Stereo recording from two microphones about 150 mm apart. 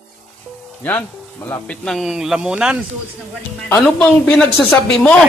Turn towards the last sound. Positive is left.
turn(degrees=5)  # may be behind; listen again after turning